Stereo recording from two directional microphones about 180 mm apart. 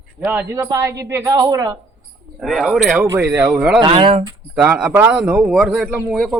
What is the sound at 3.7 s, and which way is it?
Speech, 25° right (ahead or behind).